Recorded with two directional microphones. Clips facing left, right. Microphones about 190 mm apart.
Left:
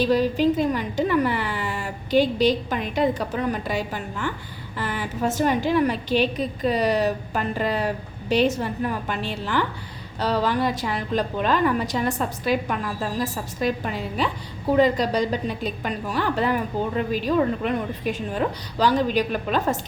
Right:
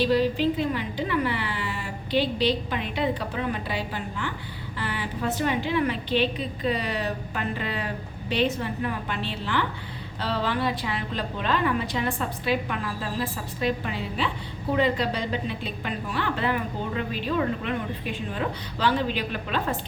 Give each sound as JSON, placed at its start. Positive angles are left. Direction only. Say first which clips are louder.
{"t": 0.0, "sound": "a woman's voice", "louder": "left 3 dB", "side_deg": 45}